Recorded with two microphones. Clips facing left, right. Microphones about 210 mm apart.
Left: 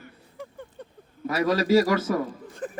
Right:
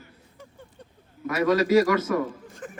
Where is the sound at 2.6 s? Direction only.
35° left (ahead or behind).